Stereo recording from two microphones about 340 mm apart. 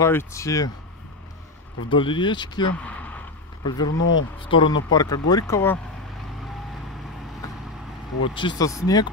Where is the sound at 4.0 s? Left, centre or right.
Left.